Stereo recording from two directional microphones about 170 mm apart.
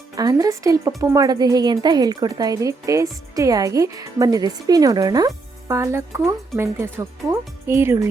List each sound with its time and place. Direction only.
0.2 s a woman's voice: 20° right (ahead or behind)